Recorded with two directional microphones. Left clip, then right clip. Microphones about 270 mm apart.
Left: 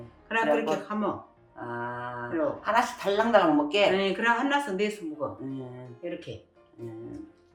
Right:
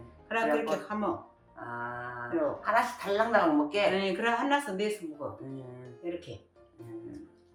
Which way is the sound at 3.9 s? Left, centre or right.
Centre.